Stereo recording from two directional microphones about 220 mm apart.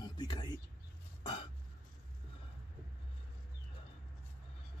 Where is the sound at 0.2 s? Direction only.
20° left (ahead or behind).